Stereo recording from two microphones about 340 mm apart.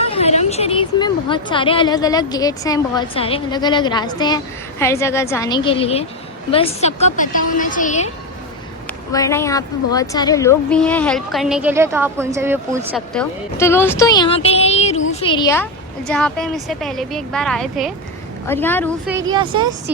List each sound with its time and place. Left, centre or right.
0.0 s a woman's voice: centre
9.1 s a woman's voice: centre
13.1 s a woman's voice: centre
19.3 s a woman's voice: centre